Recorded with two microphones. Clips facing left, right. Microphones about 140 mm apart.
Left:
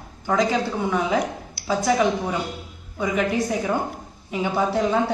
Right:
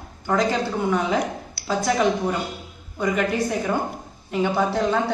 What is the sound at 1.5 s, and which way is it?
A woman's voice, 10° left (ahead or behind).